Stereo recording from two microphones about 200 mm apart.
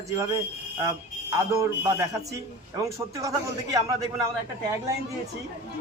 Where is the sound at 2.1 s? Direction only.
15° right (ahead or behind).